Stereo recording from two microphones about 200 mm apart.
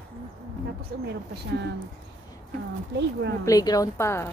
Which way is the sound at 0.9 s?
55° right (ahead or behind).